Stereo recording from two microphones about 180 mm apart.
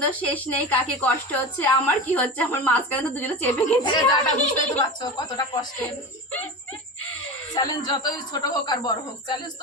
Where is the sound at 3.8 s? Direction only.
25° left (ahead or behind).